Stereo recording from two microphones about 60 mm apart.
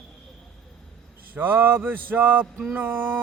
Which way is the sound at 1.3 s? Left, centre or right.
Right.